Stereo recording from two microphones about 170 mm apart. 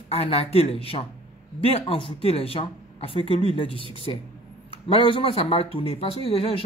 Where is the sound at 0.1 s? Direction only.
35° left (ahead or behind).